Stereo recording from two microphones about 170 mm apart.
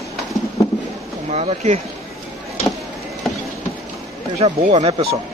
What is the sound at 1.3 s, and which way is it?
Speech, 40° right (ahead or behind).